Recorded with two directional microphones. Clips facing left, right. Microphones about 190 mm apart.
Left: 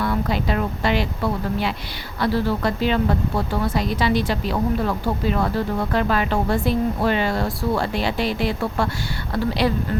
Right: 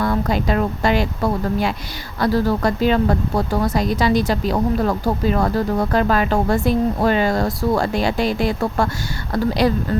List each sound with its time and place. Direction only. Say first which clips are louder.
0.0 s speech: right 3 dB; 45° right (ahead or behind)